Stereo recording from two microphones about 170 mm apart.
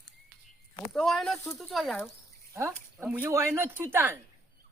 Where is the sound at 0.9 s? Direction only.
Centre (ahead or behind).